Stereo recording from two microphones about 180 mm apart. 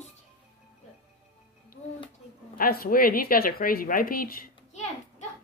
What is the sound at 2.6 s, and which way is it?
Speech, 55° left (ahead or behind).